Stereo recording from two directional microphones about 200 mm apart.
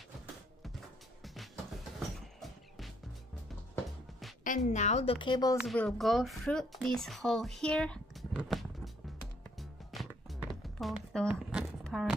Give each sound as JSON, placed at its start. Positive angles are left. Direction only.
{"t": 1.2, "sound": "music", "side_deg": 0}
{"t": 4.5, "sound": "a woman's voice", "side_deg": 35}
{"t": 5.7, "sound": "speech", "side_deg": 0}
{"t": 8.4, "sound": "a sound", "side_deg": 0}
{"t": 9.6, "sound": "music", "side_deg": 0}